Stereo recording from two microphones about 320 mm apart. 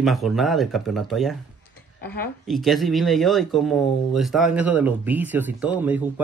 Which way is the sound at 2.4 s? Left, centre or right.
Centre.